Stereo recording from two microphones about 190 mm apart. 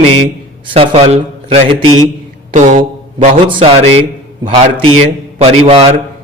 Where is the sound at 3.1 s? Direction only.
30° right (ahead or behind).